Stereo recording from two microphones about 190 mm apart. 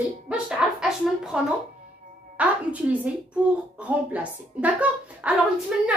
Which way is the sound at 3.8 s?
5° right (ahead or behind).